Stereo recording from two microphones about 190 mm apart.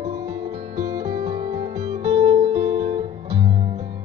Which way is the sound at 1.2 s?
30° right (ahead or behind).